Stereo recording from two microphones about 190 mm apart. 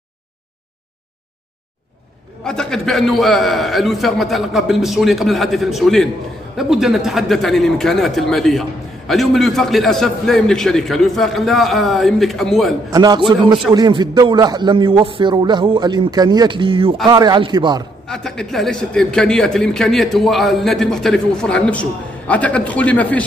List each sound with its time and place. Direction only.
2.4 s a man's voice: 5° left (ahead or behind)
12.9 s a man's voice: 20° right (ahead or behind)
18.0 s a man's voice: 5° left (ahead or behind)